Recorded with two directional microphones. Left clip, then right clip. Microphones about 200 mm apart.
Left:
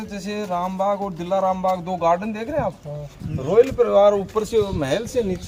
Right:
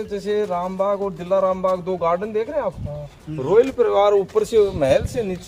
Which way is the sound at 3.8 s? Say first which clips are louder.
Left 1 dB; 45° right (ahead or behind).